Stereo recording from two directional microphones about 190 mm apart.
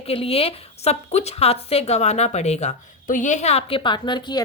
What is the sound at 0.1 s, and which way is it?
A woman's voice, 30° left (ahead or behind).